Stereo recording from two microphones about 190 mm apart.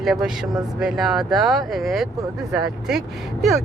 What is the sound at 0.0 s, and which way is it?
Speech, centre (ahead or behind).